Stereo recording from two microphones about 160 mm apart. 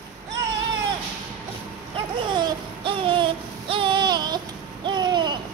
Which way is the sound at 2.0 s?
30° right (ahead or behind).